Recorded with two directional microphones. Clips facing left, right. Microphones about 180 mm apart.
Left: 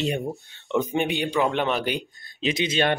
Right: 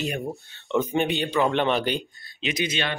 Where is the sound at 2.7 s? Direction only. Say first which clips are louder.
Left 6 dB; 50° left (ahead or behind).